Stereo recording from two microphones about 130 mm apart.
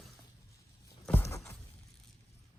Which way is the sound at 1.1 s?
20° left (ahead or behind).